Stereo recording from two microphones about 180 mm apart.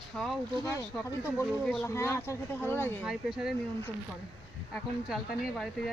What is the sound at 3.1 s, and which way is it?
Speech, centre (ahead or behind).